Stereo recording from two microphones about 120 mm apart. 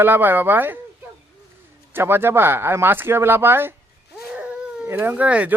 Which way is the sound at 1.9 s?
20° right (ahead or behind).